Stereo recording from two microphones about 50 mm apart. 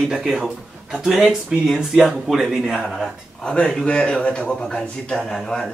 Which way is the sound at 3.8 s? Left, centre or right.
Centre.